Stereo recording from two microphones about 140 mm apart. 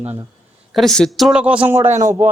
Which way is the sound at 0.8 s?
5° left (ahead or behind).